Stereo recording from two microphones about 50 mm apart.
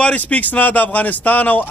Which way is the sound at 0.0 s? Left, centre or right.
Left.